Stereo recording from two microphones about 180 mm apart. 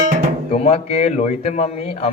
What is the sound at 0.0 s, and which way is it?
Music, 45° right (ahead or behind).